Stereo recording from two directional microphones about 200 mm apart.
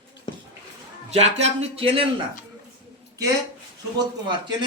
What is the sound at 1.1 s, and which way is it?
Speech, 35° right (ahead or behind).